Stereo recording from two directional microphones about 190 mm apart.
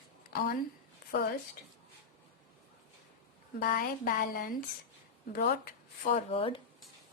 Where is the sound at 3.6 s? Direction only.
45° left (ahead or behind).